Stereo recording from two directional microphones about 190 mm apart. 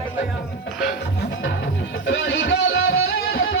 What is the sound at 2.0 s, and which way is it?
Music, 65° left (ahead or behind).